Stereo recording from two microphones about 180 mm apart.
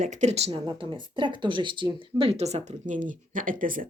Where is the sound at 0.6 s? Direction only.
25° right (ahead or behind).